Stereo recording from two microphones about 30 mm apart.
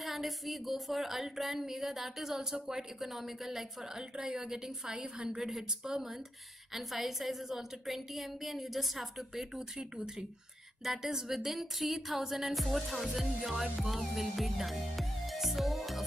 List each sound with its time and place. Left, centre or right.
0.0 s a woman's voice: centre
4.3 s a woman's voice: right
5.4 s a woman's voice: centre
6.7 s a woman's voice: centre
10.8 s speech: centre
12.5 s a woman's voice: centre
15.3 s music: centre